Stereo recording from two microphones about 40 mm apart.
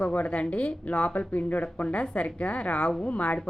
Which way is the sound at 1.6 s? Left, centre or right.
Left.